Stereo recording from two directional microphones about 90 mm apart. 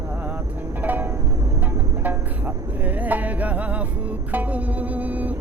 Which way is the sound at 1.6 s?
20° right (ahead or behind).